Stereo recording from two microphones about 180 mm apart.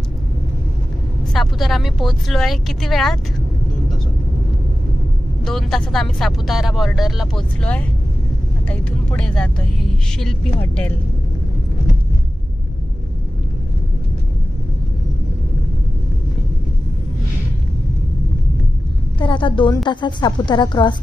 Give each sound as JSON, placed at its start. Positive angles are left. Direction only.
{"t": 1.3, "sound": "speech", "side_deg": 0}
{"t": 5.4, "sound": "speech", "side_deg": 0}
{"t": 10.6, "sound": "speech", "side_deg": 10}
{"t": 19.1, "sound": "a woman's voice", "side_deg": 25}